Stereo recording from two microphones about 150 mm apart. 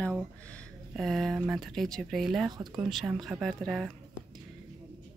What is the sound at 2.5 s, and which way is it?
Speech, 25° right (ahead or behind).